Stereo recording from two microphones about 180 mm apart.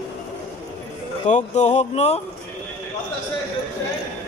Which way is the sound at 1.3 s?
40° left (ahead or behind).